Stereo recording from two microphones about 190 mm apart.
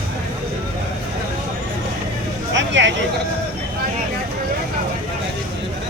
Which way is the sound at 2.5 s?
70° right (ahead or behind).